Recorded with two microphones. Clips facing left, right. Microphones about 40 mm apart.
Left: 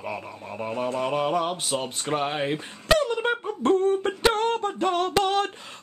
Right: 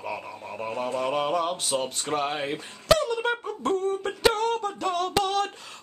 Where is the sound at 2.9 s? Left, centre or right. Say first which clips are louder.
Left 1 dB; left.